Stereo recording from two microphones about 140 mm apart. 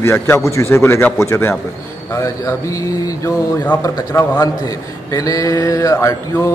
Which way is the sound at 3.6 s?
15° left (ahead or behind).